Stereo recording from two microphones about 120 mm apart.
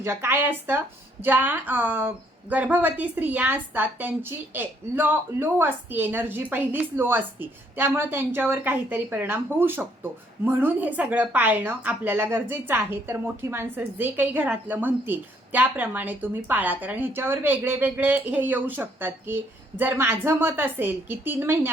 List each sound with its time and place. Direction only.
0.0 s a woman's voice: 20° right (ahead or behind)